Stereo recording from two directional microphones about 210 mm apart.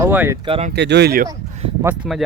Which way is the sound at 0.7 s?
55° right (ahead or behind).